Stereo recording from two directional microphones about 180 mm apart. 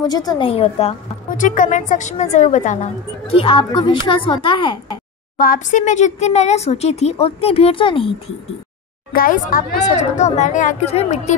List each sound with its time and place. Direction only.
0.0 s a woman's voice: 20° left (ahead or behind)
1.3 s a woman's voice: 45° left (ahead or behind); by 4.9 s 25° left (ahead or behind)
5.4 s speech: 45° left (ahead or behind); by 8.4 s 30° left (ahead or behind)
9.1 s speech: 50° left (ahead or behind)